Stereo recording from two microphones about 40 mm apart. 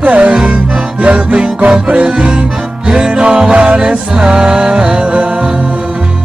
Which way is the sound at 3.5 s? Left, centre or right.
Right.